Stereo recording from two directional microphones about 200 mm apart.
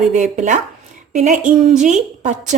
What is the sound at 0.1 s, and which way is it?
Speech, 40° right (ahead or behind).